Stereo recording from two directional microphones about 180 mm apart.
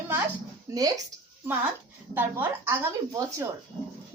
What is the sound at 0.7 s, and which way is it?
Speech, 20° right (ahead or behind).